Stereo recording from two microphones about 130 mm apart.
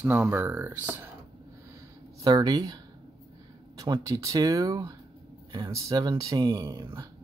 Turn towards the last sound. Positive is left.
turn(degrees=-25)  # may be behind; listen again after turning